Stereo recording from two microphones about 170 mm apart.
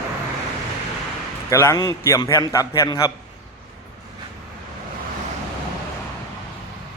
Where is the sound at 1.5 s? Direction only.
15° left (ahead or behind).